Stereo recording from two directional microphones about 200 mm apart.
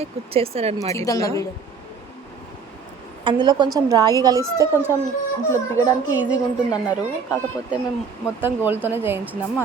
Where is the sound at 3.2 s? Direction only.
25° right (ahead or behind).